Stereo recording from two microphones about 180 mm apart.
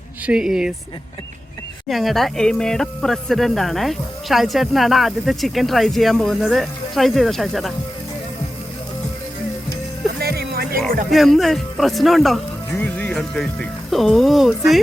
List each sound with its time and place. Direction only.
0.3 s speech: 5° right (ahead or behind)
1.9 s speech: centre (ahead or behind)
10.2 s music: 60° right (ahead or behind)
11.1 s speech: centre (ahead or behind)